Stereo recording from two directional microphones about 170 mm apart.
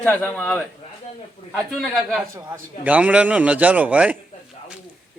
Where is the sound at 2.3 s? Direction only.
15° right (ahead or behind).